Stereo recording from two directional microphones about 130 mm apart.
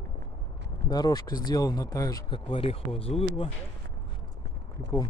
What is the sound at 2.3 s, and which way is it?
Speech, 40° left (ahead or behind).